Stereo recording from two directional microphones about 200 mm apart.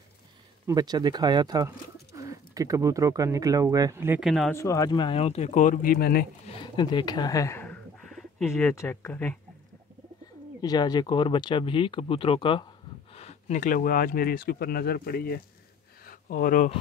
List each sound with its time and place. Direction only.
0.7 s speech: 20° right (ahead or behind)
4.3 s speech: centre (ahead or behind)
4.6 s speech: 15° left (ahead or behind); by 6.2 s 50° left (ahead or behind)
6.4 s speech: 25° left (ahead or behind)
10.6 s speech: 20° left (ahead or behind); by 15.4 s 50° left (ahead or behind)
16.0 s a sound: 45° left (ahead or behind)